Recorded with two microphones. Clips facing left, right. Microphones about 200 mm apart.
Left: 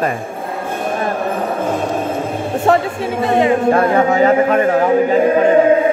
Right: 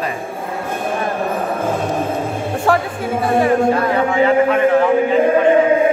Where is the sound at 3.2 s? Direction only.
20° left (ahead or behind).